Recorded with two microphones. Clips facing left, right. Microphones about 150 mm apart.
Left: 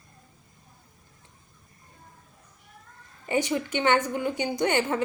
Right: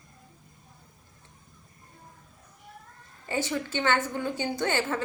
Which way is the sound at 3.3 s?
15° left (ahead or behind).